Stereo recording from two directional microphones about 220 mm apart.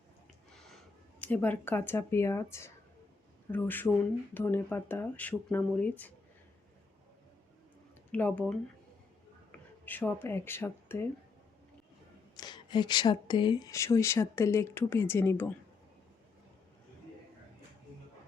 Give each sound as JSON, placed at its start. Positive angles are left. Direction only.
{"t": 1.2, "sound": "speech", "side_deg": 5}
{"t": 8.1, "sound": "speech", "side_deg": 5}
{"t": 9.8, "sound": "speech", "side_deg": 10}
{"t": 12.4, "sound": "speech", "side_deg": 20}